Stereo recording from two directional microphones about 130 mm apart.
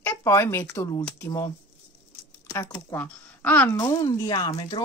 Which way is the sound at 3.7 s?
25° left (ahead or behind).